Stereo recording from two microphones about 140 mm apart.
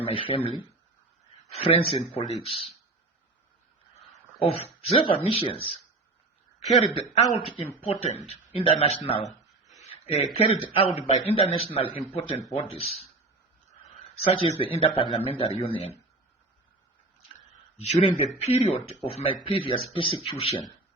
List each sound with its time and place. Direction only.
0.0 s a man's voice: 40° left (ahead or behind)
1.5 s a man's voice: 40° left (ahead or behind)
4.1 s speech: 45° left (ahead or behind)
6.8 s a man's voice: 40° left (ahead or behind)
9.9 s a sound: 45° left (ahead or behind)
10.3 s a man's voice: 45° left (ahead or behind)
14.2 s a man's voice: 40° left (ahead or behind)
17.8 s a man's voice: 45° left (ahead or behind)